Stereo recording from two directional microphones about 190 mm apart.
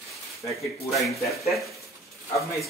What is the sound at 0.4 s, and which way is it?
Speech, centre (ahead or behind).